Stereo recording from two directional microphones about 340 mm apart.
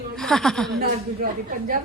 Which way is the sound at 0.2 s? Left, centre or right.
Centre.